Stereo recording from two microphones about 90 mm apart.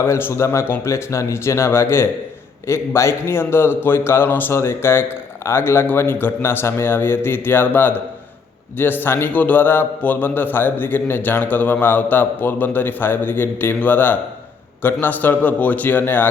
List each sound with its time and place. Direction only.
0.0 s a man's voice: 30° left (ahead or behind)